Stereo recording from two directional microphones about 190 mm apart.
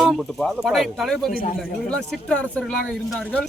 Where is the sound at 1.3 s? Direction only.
50° left (ahead or behind).